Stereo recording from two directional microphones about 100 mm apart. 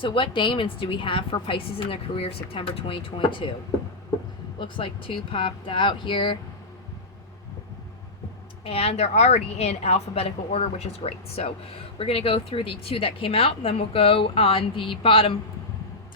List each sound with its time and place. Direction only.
0.0 s a woman's voice: 60° left (ahead or behind)
4.6 s a woman's voice: 60° left (ahead or behind)
8.6 s a woman's voice: 80° left
11.9 s speech: 70° left (ahead or behind)